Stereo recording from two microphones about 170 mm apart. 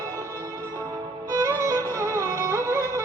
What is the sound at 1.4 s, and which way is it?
Music, 15° right (ahead or behind).